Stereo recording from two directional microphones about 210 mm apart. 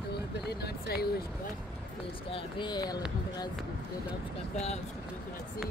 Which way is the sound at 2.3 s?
20° left (ahead or behind).